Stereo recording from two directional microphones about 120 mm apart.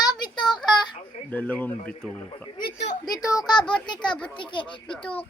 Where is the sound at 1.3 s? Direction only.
15° left (ahead or behind).